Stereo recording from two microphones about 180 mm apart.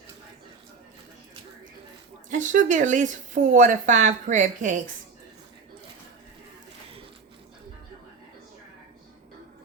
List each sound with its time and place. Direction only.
2.3 s speech: 45° right (ahead or behind)